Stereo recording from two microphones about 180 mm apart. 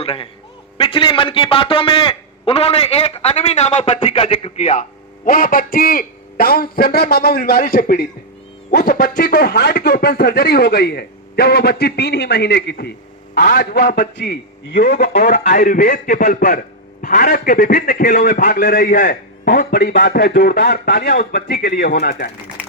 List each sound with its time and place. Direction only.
0.0 s a sound: 30° left (ahead or behind)
0.8 s a man's voice: 30° left (ahead or behind); by 19.9 s 50° left (ahead or behind)
19.9 s speech: 60° left (ahead or behind)